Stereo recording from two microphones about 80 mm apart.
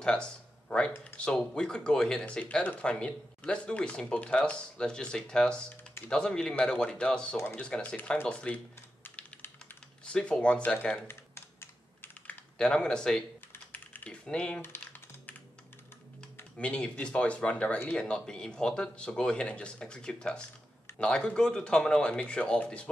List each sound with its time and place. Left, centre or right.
0.0 s speech: centre
2.4 s speech: left
9.0 s typing: left
10.0 s speech: centre
11.1 s typing: left
12.5 s speech: centre
13.7 s typing: centre
14.6 s typing: left
16.5 s speech: centre